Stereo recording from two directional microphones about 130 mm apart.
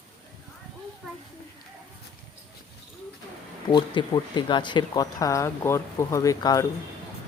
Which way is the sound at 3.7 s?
35° left (ahead or behind).